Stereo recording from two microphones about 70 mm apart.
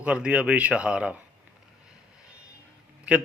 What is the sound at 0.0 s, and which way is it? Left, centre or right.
A man's voice, centre.